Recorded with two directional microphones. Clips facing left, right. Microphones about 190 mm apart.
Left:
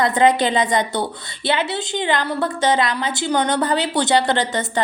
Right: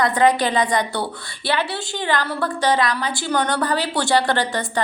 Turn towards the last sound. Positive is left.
turn(degrees=20)  # may be behind; listen again after turning